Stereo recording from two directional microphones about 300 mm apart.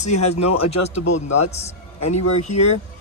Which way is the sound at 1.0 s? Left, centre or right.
Left.